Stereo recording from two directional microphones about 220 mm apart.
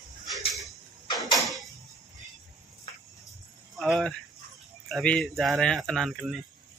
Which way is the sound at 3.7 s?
Centre (ahead or behind).